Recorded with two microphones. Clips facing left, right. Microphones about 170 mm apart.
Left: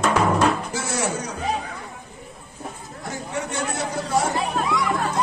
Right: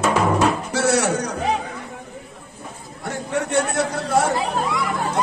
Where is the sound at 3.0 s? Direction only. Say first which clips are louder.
Right 5 dB; 65° right (ahead or behind).